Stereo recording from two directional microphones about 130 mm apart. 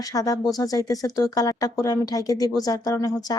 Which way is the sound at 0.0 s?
25° left (ahead or behind).